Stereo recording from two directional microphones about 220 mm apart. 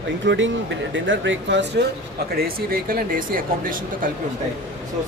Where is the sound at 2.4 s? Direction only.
40° right (ahead or behind).